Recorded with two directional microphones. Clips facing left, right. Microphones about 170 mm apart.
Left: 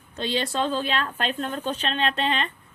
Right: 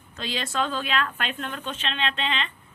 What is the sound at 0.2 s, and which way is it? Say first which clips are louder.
A woman's voice: left 3 dB; 30° left (ahead or behind).